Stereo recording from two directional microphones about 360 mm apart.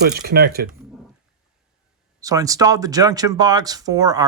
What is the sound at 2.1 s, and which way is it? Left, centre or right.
Speech, centre.